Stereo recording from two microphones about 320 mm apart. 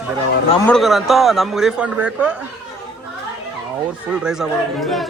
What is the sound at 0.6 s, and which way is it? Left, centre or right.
Speech, centre.